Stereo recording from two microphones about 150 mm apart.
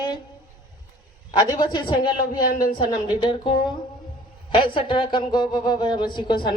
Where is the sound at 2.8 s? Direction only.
30° left (ahead or behind).